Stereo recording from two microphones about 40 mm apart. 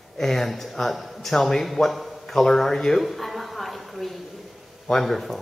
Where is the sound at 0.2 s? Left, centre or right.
Centre.